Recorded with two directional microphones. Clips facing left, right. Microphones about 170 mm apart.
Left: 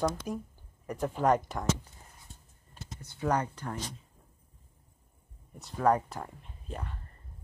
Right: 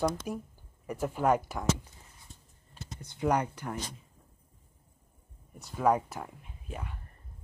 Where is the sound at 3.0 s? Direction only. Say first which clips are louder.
Right 1 dB; 20° right (ahead or behind).